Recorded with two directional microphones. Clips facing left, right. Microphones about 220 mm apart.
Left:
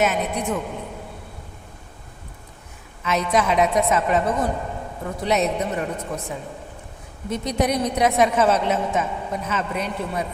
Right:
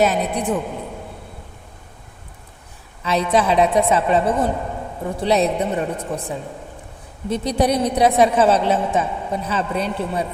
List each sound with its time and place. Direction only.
0.0 s a woman's voice: 35° right (ahead or behind)
3.0 s a woman's voice: 30° right (ahead or behind)